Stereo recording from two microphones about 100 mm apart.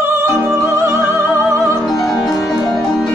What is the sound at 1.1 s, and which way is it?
Opera, 25° right (ahead or behind).